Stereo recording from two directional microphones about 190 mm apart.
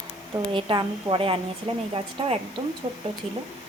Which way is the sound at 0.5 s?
25° right (ahead or behind).